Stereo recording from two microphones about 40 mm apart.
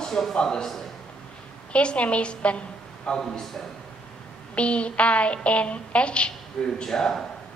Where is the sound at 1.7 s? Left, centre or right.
Left.